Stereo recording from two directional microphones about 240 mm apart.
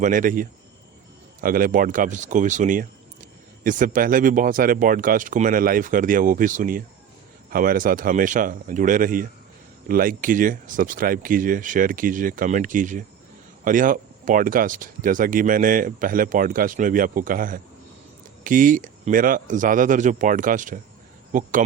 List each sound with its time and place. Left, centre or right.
0.0 s speech: right